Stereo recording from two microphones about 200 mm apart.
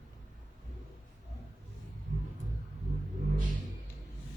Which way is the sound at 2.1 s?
40° right (ahead or behind).